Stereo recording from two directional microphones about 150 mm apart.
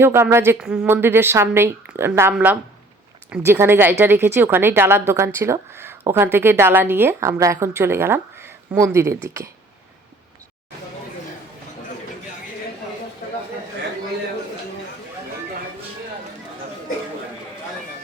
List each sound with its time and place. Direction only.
0.0 s speech: 15° right (ahead or behind)